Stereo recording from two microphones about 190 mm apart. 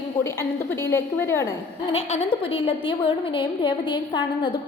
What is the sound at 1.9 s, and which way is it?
A woman's voice, 30° left (ahead or behind).